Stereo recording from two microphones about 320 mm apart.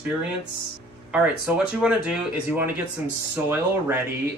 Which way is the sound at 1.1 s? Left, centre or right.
Centre.